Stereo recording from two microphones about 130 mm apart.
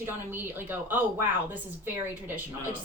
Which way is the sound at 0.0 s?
15° right (ahead or behind).